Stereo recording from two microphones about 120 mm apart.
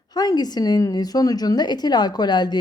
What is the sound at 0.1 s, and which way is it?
A woman's voice, 35° left (ahead or behind).